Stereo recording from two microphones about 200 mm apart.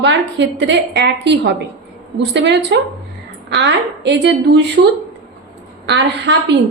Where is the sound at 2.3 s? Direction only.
60° right (ahead or behind).